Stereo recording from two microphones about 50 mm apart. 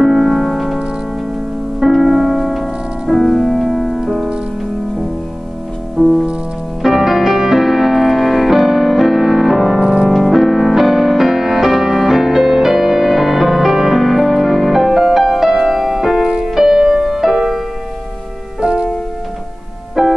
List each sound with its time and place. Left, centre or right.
0.0 s music: centre
1.9 s music: centre
5.9 s music: centre
10.0 s music: centre
18.6 s music: centre
20.0 s music: centre